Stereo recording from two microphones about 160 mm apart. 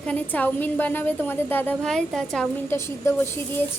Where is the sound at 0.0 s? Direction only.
10° left (ahead or behind).